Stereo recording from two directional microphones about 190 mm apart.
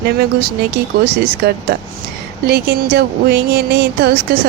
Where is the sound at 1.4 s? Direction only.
60° right (ahead or behind).